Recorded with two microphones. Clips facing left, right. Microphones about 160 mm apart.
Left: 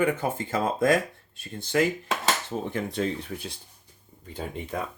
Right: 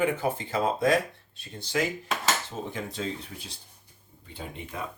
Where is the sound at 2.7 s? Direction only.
60° left (ahead or behind).